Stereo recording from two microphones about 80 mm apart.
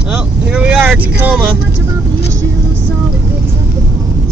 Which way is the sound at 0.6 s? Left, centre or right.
Right.